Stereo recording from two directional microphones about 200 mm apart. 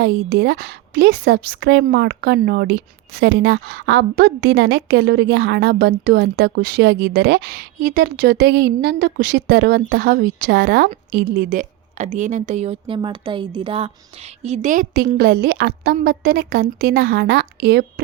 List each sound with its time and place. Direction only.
0.0 s a woman's voice: 55° right (ahead or behind)